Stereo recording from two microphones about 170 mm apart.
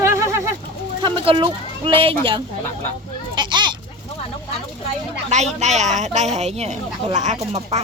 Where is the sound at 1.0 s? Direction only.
30° right (ahead or behind).